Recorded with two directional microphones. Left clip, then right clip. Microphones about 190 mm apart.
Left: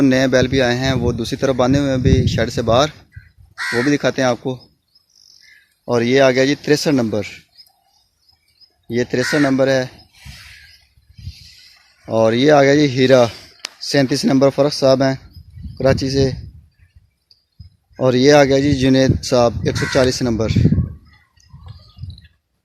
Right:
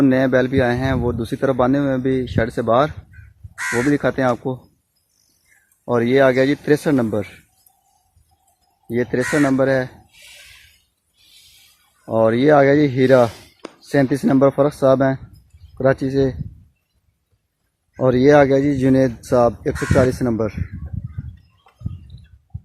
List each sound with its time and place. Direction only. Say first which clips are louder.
0.0 s speech: left 1 dB; 15° left (ahead or behind)
3.5 s speech: left 1 dB; centre (ahead or behind)
3.9 s speech: left 2 dB; 15° left (ahead or behind)
5.8 s speech: left 1 dB; 15° left (ahead or behind)
8.9 s speech: left 2 dB; 15° left (ahead or behind)
12.0 s speech: left 1 dB; 15° left (ahead or behind)
18.0 s speech: left 1 dB; 15° left (ahead or behind)